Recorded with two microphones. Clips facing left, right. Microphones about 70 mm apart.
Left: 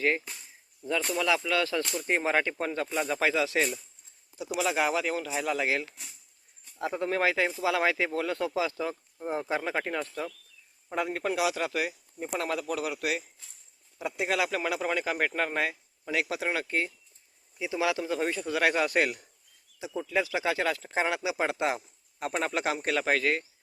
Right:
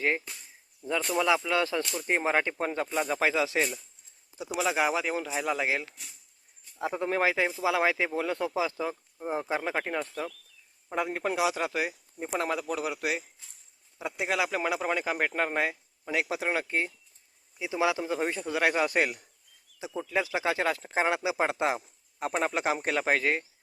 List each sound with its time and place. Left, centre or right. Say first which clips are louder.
1.1 s speech: right 2 dB; right